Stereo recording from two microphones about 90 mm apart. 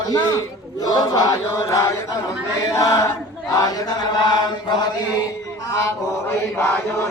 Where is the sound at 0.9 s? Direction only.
45° left (ahead or behind).